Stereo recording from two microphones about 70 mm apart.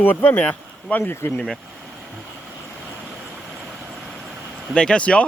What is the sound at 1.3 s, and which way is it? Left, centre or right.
Speech, centre.